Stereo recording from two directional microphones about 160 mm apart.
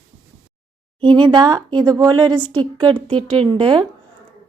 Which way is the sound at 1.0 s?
30° right (ahead or behind).